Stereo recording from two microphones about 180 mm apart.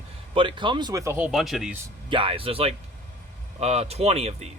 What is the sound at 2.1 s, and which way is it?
Speech, 30° right (ahead or behind).